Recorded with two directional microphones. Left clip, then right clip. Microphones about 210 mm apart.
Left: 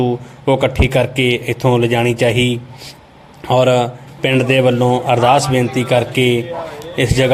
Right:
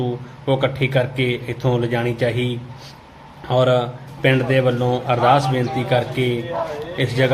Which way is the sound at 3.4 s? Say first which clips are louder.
Left 5 dB; 35° left (ahead or behind).